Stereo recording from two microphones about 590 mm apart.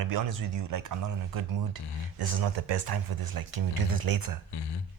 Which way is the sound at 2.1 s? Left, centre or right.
Right.